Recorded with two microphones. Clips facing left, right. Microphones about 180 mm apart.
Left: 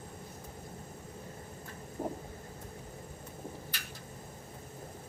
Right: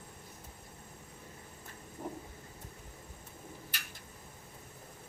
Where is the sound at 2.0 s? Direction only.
45° left (ahead or behind).